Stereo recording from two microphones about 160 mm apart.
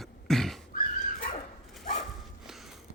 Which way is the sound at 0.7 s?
50° left (ahead or behind).